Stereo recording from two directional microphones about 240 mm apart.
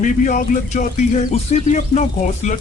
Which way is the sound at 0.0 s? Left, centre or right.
Left.